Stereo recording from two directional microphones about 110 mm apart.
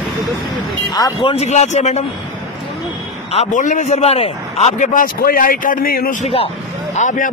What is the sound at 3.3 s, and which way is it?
A man's voice, 90° left.